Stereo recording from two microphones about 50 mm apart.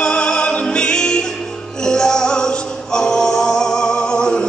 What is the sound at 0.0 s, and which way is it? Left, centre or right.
Music, centre.